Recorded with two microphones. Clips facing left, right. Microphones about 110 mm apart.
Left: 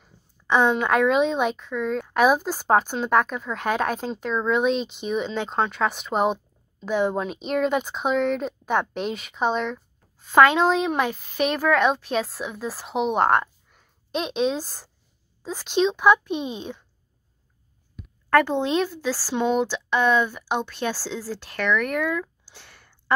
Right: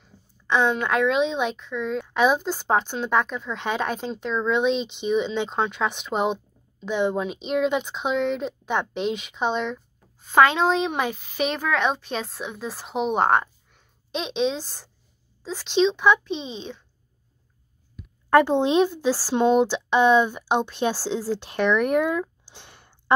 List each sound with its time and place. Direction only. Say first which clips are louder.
0.0 s a woman's voice: right 1 dB; 10° left (ahead or behind)
18.3 s speech: right 2 dB; 20° right (ahead or behind)
22.5 s a sound: right 2 dB; 20° right (ahead or behind)